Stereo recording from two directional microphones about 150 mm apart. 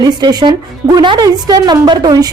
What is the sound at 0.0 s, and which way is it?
A woman's voice, 25° right (ahead or behind).